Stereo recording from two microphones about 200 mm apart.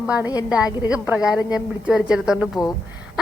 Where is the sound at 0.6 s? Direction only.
20° left (ahead or behind).